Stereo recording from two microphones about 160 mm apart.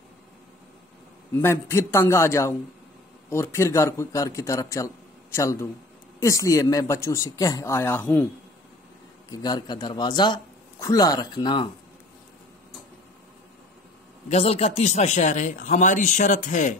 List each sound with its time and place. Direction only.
1.3 s a man's voice: 15° left (ahead or behind)
9.3 s a man's voice: 25° left (ahead or behind)
14.3 s speech: 40° left (ahead or behind)